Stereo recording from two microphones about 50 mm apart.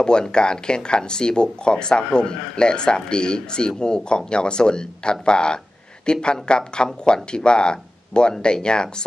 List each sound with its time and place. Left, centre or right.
0.0 s speech: centre